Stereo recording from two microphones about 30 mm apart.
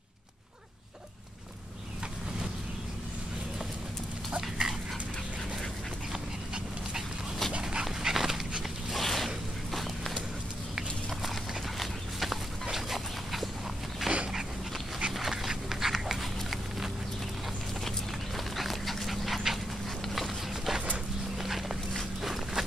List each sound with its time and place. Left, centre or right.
4.4 s dog: centre
8.0 s dog: centre
8.9 s a sound: centre
11.8 s a sound: centre
12.7 s dog: centre
14.0 s dog: centre
17.8 s dog: centre
21.4 s walk: centre
22.2 s a sound: centre